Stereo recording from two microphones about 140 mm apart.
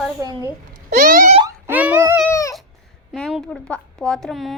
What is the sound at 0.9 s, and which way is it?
Boing, 75° right (ahead or behind).